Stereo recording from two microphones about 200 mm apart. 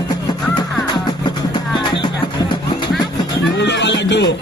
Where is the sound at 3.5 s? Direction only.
60° left (ahead or behind).